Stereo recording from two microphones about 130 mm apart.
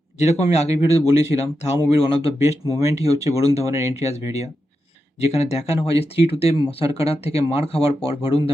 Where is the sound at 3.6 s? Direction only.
25° right (ahead or behind).